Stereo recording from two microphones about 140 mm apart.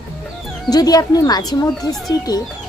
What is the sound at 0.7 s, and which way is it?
Speech, 30° left (ahead or behind).